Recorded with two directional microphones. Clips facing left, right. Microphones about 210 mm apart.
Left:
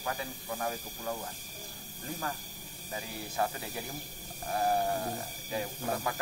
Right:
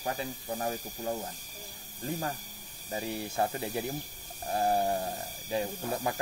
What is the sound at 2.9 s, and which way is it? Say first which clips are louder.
Speech: right 6 dB; 25° right (ahead or behind).